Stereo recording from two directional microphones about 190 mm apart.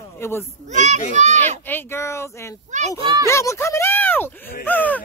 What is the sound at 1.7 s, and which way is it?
Speech, 10° left (ahead or behind).